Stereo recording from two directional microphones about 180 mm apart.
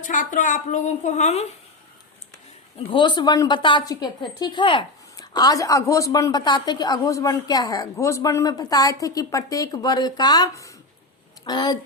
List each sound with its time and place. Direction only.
0.0 s a woman's voice: 45° left (ahead or behind)
2.7 s a woman's voice: 25° left (ahead or behind)